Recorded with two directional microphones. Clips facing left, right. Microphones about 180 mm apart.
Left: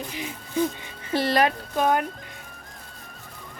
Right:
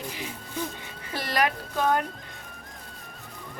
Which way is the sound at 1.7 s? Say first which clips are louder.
Left 2 dB; 15° left (ahead or behind).